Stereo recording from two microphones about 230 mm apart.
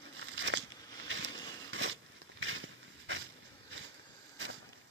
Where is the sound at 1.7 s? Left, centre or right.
Right.